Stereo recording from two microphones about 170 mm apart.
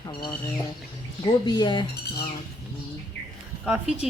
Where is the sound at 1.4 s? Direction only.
25° left (ahead or behind).